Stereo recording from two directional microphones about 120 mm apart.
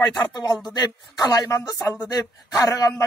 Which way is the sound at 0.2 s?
35° left (ahead or behind).